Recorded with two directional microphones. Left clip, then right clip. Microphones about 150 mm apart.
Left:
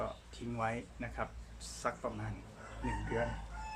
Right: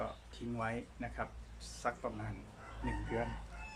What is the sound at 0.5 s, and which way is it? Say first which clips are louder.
Speech: left 3 dB; 15° left (ahead or behind).